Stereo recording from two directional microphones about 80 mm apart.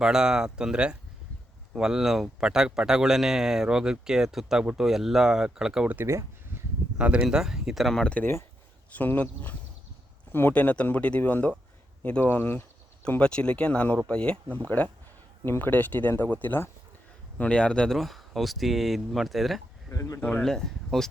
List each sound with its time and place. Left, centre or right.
0.0 s a man's voice: centre
6.1 s a sound: right
7.0 s a man's voice: centre
8.9 s speech: left
13.1 s speech: centre
15.4 s speech: left
17.9 s speech: centre
19.9 s speech: left
20.2 s speech: centre